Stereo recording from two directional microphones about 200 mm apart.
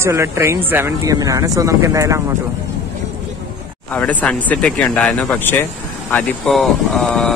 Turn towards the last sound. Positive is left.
turn(degrees=0)  # may be behind; listen again after turning